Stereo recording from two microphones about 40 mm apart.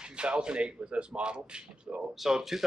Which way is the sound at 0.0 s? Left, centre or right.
Right.